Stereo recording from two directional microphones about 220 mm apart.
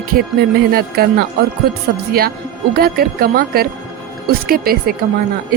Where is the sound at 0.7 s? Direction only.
45° right (ahead or behind).